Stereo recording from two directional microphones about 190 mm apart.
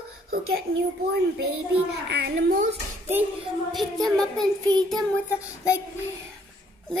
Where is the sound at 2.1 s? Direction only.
65° right (ahead or behind).